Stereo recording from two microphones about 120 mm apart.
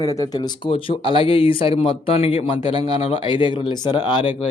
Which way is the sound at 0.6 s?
50° left (ahead or behind).